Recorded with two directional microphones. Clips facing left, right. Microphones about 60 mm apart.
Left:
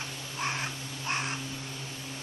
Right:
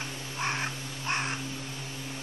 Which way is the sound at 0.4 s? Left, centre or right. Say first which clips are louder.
Right 2 dB; centre.